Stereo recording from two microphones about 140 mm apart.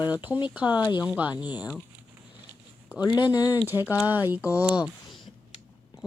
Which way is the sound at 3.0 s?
30° left (ahead or behind).